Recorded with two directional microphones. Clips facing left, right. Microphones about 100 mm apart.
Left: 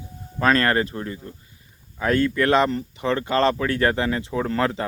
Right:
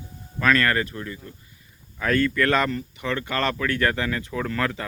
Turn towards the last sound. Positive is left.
turn(degrees=30)  # may be behind; listen again after turning